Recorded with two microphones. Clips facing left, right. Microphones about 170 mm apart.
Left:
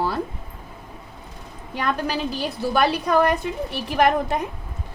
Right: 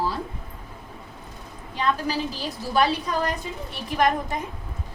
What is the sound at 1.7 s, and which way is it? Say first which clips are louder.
A woman's voice: left 1 dB; 65° left (ahead or behind).